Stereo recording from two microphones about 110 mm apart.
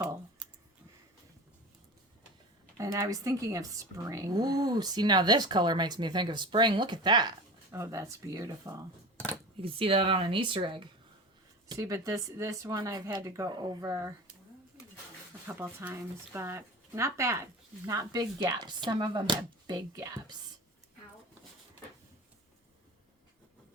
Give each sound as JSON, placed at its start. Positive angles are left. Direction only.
{"t": 2.7, "sound": "speech", "side_deg": -30}
{"t": 7.7, "sound": "speech", "side_deg": -25}
{"t": 9.6, "sound": "speech", "side_deg": -55}
{"t": 11.8, "sound": "speech", "side_deg": -30}
{"t": 15.4, "sound": "speech", "side_deg": -15}